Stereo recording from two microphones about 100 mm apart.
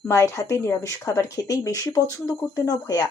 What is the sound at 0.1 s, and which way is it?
Speech, 30° left (ahead or behind).